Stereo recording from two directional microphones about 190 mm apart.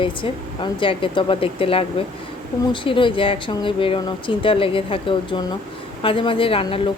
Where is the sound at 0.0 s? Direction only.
25° left (ahead or behind).